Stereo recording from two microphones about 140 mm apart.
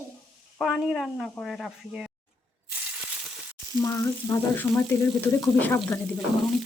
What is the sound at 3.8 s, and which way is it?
Frying, 25° left (ahead or behind).